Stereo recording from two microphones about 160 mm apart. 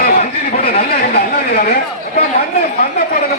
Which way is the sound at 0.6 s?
70° left (ahead or behind).